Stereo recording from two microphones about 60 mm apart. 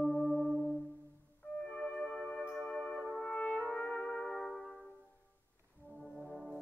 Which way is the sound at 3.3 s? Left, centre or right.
Left.